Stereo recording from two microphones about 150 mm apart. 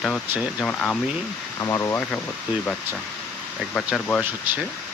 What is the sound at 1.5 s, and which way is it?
Speech, 20° left (ahead or behind).